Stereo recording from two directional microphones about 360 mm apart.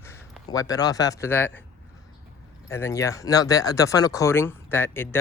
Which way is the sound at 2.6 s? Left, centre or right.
Centre.